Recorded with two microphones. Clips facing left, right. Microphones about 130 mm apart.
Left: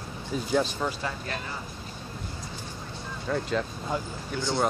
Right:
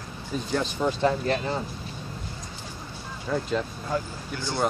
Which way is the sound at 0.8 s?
25° right (ahead or behind).